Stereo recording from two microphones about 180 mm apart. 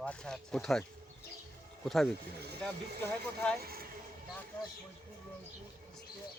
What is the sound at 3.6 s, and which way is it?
Speech, 55° right (ahead or behind).